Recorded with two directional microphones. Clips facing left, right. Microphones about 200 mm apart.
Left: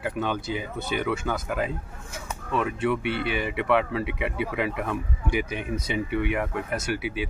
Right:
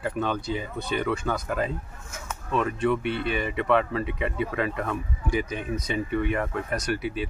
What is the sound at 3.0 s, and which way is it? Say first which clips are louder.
Speech: even; 70° left (ahead or behind).